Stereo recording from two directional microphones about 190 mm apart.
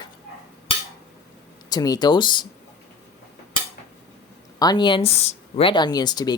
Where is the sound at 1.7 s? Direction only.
20° left (ahead or behind).